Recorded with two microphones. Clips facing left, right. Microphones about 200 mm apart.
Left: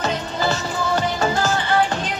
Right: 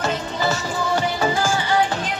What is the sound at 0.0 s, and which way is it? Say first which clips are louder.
Music: even; 10° right (ahead or behind).